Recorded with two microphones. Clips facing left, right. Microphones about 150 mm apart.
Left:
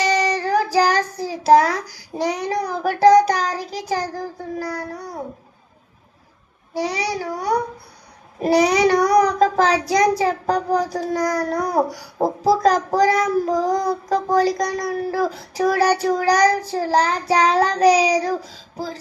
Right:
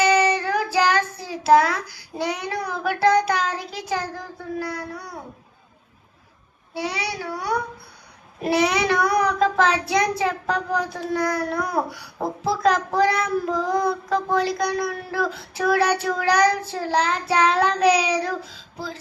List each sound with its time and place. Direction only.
0.0 s child singing: 35° left (ahead or behind)
6.7 s a child's voice: 35° left (ahead or behind)